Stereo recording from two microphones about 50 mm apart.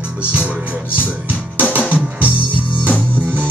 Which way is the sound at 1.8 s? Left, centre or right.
Left.